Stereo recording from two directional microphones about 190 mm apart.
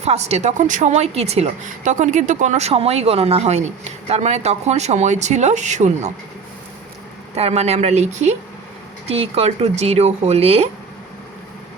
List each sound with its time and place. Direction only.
0.0 s speech: 35° right (ahead or behind)
7.3 s speech: 35° right (ahead or behind)